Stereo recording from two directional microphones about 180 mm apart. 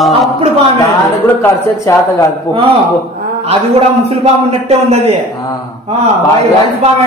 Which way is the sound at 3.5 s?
35° right (ahead or behind).